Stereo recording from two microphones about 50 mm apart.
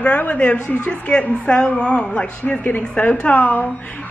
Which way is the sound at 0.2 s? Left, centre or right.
Left.